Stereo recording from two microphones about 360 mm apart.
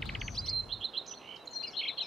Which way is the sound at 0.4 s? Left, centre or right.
Centre.